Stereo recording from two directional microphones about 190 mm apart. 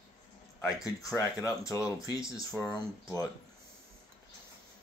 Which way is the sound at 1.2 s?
15° left (ahead or behind).